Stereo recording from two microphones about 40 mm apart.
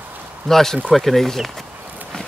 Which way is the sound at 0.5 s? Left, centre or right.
Centre.